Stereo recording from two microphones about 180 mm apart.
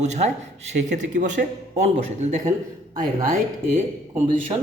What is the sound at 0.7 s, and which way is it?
A man's voice, 45° right (ahead or behind).